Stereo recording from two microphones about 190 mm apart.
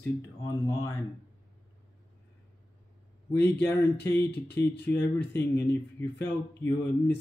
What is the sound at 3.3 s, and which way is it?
Speech, 10° left (ahead or behind).